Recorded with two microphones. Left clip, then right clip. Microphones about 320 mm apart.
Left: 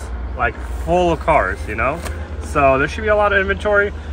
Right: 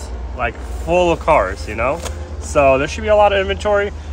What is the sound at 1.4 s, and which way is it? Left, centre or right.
Speech, right.